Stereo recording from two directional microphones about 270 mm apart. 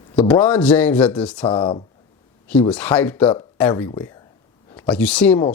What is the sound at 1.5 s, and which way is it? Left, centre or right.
Speech, centre.